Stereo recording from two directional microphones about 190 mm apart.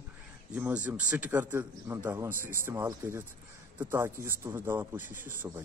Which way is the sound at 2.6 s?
10° right (ahead or behind).